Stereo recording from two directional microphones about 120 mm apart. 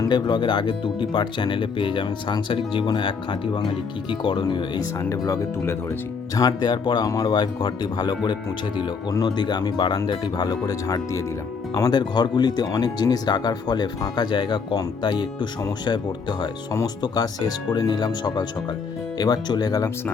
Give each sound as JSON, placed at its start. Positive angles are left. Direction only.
{"t": 0.0, "sound": "speech", "side_deg": 40}
{"t": 4.9, "sound": "speech", "side_deg": 30}
{"t": 16.7, "sound": "speech", "side_deg": 35}